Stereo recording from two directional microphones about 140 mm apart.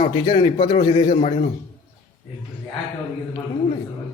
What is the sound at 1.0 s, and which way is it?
Speech, 55° left (ahead or behind).